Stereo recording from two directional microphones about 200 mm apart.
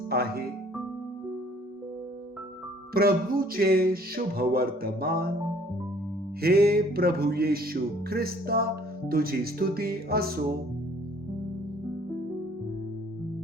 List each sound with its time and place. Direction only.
0.1 s music: 50° right (ahead or behind)
2.9 s music: 50° right (ahead or behind)
6.4 s music: 50° right (ahead or behind)